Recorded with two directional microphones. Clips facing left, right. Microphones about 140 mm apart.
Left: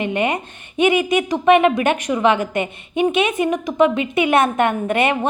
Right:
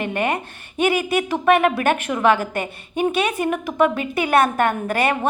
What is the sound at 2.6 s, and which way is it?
Speech, 40° right (ahead or behind).